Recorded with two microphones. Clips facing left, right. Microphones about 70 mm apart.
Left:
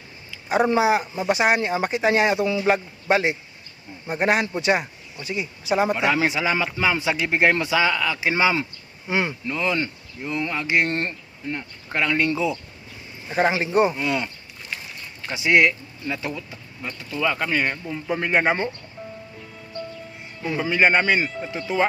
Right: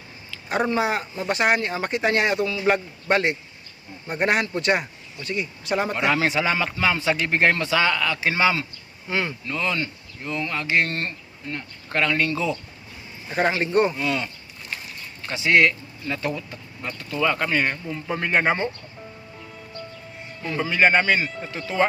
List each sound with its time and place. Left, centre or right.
0.4 s speech: centre
2.4 s speech: left
2.6 s speech: centre
8.3 s speech: centre
13.2 s a man's voice: centre
15.3 s speech: centre
20.4 s speech: centre